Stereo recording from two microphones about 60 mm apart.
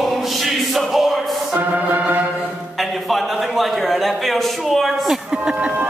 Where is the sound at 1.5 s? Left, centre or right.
Right.